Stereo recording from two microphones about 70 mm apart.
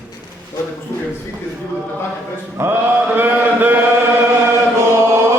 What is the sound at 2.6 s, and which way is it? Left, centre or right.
Mantra, right.